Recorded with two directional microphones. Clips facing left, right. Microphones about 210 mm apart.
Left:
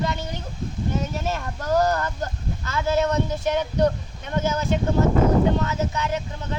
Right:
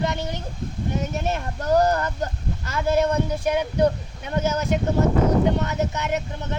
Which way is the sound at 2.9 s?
10° right (ahead or behind).